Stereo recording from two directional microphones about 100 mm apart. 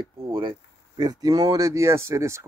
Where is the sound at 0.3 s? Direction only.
55° right (ahead or behind).